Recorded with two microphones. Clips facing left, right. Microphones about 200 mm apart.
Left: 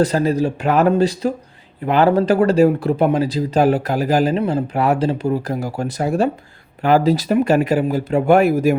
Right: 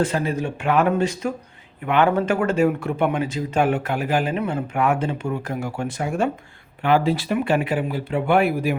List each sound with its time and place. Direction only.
0.0 s speech: 40° left (ahead or behind)